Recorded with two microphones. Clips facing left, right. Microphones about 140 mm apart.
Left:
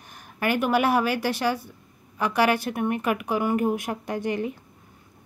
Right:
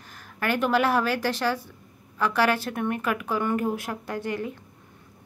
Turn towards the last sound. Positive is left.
turn(degrees=20)  # may be behind; listen again after turning